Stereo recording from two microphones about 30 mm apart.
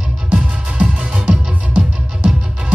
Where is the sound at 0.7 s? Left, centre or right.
Right.